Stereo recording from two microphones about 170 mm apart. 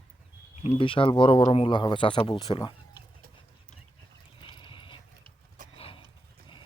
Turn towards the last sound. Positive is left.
turn(degrees=35)  # may be behind; listen again after turning